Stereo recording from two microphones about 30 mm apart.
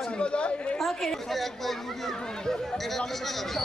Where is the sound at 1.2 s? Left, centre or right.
Centre.